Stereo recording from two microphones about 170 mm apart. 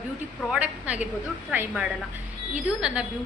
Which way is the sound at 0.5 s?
10° right (ahead or behind).